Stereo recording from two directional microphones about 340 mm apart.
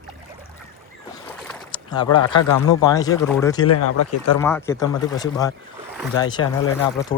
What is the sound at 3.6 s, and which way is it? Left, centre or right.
Speech, left.